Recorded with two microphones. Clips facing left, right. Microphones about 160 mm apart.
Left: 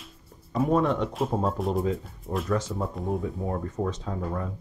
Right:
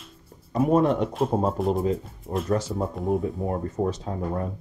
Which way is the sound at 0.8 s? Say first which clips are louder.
Right 3 dB; 40° right (ahead or behind).